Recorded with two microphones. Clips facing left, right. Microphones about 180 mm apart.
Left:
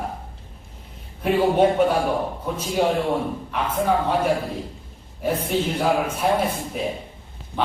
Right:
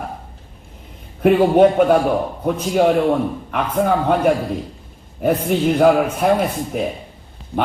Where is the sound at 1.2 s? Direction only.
60° right (ahead or behind).